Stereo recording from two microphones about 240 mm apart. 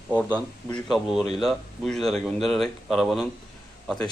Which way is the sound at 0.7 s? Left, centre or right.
Centre.